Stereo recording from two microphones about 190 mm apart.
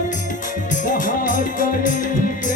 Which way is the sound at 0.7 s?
45° left (ahead or behind).